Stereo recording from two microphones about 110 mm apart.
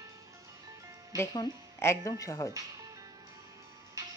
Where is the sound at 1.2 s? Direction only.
25° left (ahead or behind).